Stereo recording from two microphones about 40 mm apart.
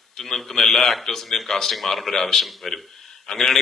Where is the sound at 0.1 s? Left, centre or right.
Centre.